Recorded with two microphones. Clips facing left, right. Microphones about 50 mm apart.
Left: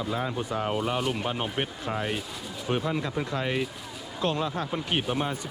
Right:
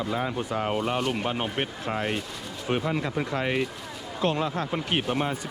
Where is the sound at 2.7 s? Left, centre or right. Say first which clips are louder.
Right 1 dB; right.